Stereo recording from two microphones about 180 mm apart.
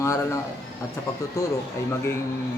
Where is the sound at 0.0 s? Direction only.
15° left (ahead or behind).